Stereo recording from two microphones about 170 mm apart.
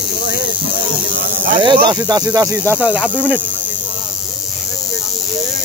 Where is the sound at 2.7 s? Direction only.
5° right (ahead or behind).